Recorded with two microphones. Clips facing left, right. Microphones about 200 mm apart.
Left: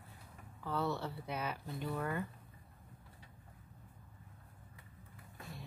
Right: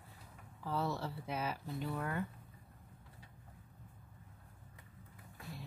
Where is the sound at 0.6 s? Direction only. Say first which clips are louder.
Left 1 dB; 5° right (ahead or behind).